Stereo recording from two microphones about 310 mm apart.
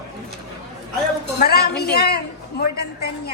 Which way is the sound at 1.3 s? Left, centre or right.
Left.